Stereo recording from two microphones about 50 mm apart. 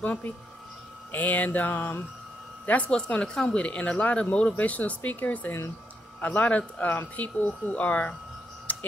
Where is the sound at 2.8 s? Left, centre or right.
Centre.